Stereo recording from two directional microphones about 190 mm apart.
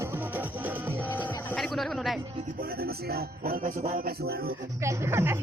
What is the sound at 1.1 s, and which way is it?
Music, centre (ahead or behind).